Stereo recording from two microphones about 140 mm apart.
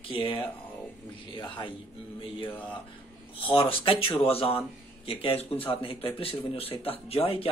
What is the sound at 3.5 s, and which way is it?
Speech, 40° left (ahead or behind).